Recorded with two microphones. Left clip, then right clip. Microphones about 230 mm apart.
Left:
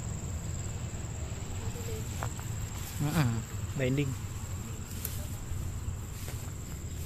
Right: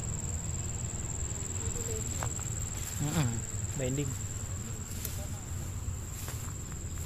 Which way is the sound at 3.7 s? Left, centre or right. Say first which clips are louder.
Left 4 dB; left.